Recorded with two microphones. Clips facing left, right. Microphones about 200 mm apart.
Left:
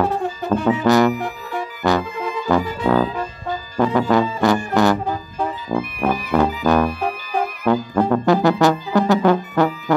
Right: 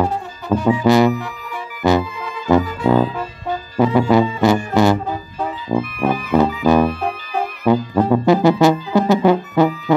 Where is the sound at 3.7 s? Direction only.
10° right (ahead or behind).